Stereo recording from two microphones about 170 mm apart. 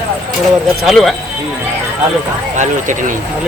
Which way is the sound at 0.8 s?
Centre (ahead or behind).